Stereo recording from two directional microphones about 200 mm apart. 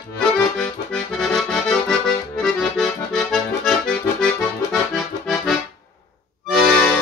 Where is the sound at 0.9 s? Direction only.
Centre (ahead or behind).